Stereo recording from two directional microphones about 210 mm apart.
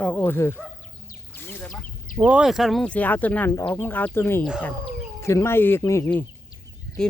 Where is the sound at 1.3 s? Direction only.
10° left (ahead or behind).